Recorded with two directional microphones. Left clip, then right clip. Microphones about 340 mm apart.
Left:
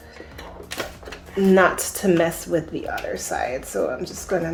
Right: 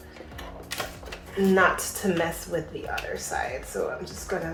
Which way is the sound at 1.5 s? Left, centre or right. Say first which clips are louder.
Left 4 dB; left.